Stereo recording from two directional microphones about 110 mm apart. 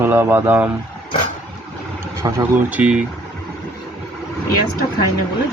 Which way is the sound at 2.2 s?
30° right (ahead or behind).